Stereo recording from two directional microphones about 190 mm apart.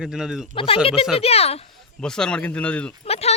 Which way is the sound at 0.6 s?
30° left (ahead or behind).